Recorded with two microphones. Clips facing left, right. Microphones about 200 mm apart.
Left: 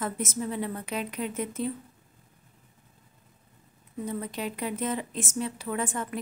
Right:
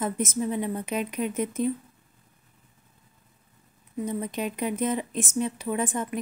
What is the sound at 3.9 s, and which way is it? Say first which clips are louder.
A woman's voice: right 3 dB; 20° right (ahead or behind).